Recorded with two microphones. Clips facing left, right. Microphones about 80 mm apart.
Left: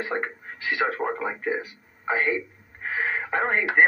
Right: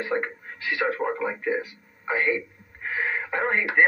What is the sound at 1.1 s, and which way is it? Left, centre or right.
Speech, centre.